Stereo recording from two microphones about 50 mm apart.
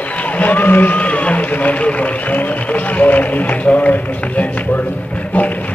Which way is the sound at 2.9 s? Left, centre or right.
Left.